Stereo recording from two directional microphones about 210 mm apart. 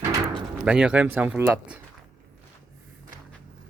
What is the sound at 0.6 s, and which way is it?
Speech, 5° right (ahead or behind).